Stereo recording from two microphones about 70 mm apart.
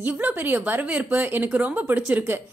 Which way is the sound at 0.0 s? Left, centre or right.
Right.